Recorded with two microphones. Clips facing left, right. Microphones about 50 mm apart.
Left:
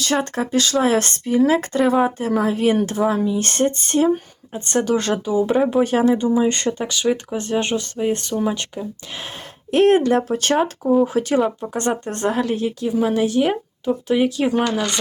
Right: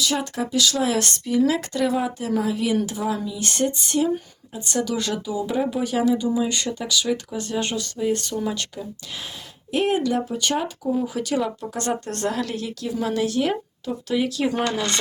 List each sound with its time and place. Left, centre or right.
0.0 s speech: left
9.7 s speech: left
11.0 s speech: left